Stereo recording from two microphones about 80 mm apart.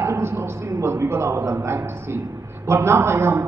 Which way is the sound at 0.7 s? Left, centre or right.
Right.